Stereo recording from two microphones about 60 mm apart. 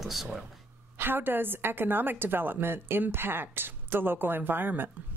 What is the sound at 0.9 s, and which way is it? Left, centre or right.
A woman's voice, right.